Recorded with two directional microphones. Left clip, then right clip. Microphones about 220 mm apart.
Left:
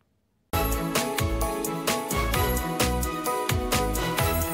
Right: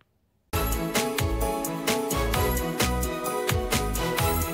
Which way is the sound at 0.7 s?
Centre (ahead or behind).